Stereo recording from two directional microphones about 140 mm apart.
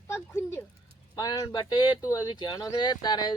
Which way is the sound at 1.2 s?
30° left (ahead or behind).